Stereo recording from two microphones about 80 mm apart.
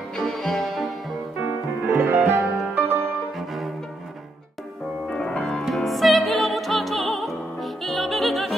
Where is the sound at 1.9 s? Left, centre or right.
Right.